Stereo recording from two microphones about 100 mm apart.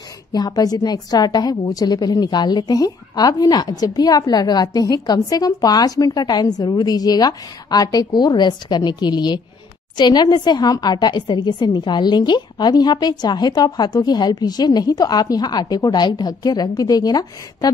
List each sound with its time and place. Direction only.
0.3 s a woman's voice: 40° left (ahead or behind)